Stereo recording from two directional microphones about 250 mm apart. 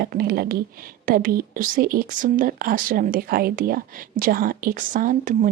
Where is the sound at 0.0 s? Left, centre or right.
Right.